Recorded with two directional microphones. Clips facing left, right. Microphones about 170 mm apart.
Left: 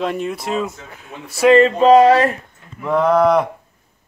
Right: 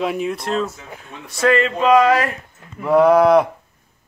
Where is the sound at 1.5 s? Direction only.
35° left (ahead or behind).